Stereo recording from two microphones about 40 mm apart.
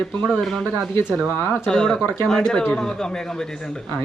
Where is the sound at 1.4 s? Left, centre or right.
Left.